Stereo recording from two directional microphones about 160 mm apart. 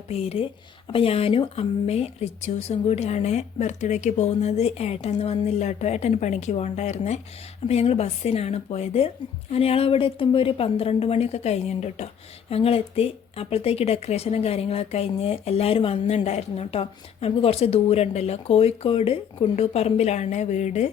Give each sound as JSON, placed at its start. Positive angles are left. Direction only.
{"t": 0.1, "sound": "speech", "side_deg": 40}